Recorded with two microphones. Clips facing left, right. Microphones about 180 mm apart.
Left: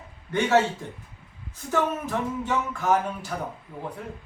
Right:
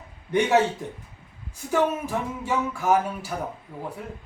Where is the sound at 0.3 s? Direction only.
15° right (ahead or behind).